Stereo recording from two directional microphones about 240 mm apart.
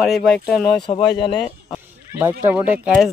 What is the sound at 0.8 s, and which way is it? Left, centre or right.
Speech, centre.